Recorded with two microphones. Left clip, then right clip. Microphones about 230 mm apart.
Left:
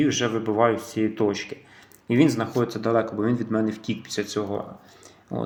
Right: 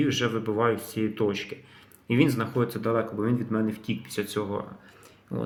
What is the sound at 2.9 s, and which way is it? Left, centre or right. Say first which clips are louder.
Speech: left 5 dB; centre.